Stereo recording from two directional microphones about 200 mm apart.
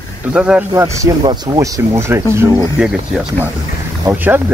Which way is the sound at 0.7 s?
15° right (ahead or behind).